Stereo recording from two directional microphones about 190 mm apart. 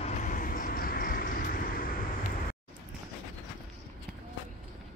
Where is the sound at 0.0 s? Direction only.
40° left (ahead or behind).